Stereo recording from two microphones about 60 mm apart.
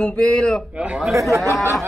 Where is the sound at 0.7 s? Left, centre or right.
Centre.